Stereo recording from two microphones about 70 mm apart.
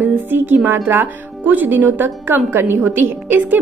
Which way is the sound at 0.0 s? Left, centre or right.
Right.